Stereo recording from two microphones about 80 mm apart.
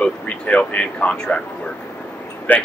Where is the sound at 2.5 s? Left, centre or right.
Left.